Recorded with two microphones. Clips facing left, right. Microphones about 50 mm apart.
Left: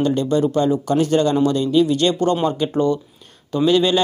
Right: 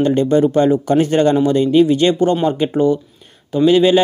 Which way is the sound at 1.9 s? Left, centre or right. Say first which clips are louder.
Right 3 dB; right.